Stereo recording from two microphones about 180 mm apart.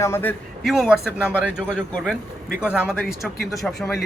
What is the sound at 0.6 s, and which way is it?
Speech, centre (ahead or behind).